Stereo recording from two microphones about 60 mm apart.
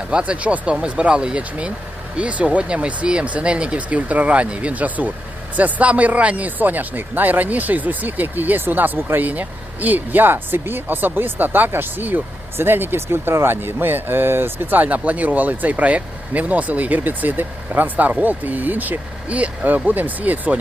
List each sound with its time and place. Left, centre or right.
0.1 s speech: right